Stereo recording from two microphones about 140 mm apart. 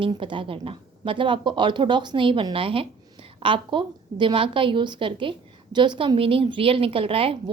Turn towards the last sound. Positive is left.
turn(degrees=-40)  # may be behind; listen again after turning